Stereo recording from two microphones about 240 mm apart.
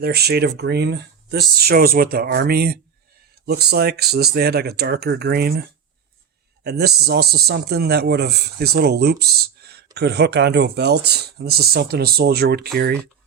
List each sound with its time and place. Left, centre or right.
0.0 s speech: right
6.7 s speech: right